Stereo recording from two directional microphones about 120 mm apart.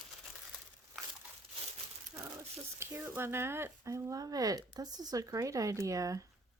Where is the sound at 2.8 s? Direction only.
20° right (ahead or behind).